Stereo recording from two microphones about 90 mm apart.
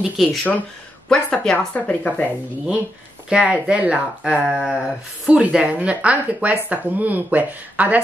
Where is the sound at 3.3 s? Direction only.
10° right (ahead or behind).